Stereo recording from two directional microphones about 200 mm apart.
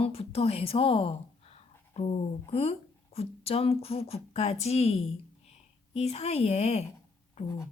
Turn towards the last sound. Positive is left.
turn(degrees=15)  # may be behind; listen again after turning